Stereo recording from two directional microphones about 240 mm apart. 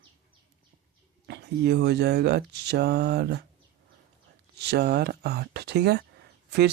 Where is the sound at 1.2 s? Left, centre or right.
Right.